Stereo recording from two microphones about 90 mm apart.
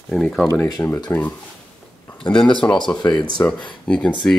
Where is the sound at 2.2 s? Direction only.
10° left (ahead or behind).